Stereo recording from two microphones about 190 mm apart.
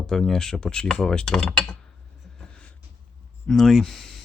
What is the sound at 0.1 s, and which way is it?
Speech, 5° left (ahead or behind).